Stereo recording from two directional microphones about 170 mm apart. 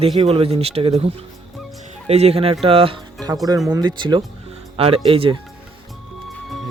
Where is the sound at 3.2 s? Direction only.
20° right (ahead or behind).